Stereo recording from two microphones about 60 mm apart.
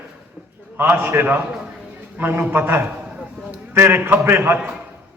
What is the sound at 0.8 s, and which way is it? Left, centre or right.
A man's voice, right.